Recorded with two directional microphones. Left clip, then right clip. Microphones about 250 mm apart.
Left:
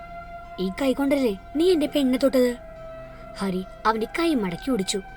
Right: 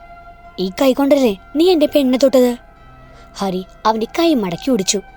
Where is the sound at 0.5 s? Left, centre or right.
Right.